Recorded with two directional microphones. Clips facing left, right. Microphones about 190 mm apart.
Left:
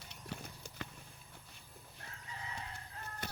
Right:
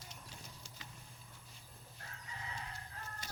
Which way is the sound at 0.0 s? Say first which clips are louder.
Left 7 dB; 65° left (ahead or behind).